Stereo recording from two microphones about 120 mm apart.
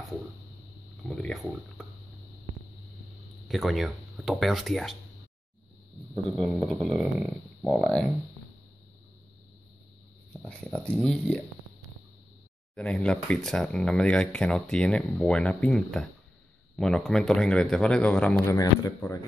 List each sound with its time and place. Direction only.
1.0 s a sound: 5° left (ahead or behind)
3.4 s speech: centre (ahead or behind)
6.3 s speech: 5° right (ahead or behind)
10.4 s speech: 10° left (ahead or behind)
12.7 s speech: 10° left (ahead or behind)
18.5 s speech: 25° left (ahead or behind)